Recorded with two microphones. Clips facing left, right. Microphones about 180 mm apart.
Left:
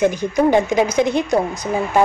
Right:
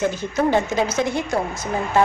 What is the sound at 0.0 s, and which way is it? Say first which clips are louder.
A woman's voice: left 5 dB; 15° left (ahead or behind).